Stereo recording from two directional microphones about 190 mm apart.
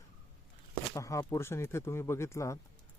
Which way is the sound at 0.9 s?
15° left (ahead or behind).